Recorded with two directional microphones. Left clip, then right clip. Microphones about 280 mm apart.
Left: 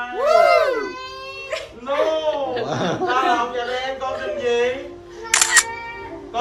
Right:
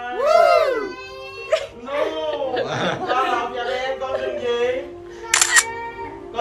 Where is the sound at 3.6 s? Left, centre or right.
Centre.